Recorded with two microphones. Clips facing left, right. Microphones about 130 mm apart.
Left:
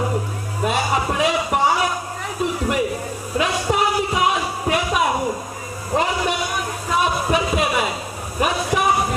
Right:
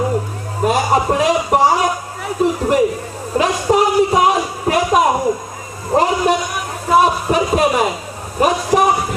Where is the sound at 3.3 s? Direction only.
40° right (ahead or behind).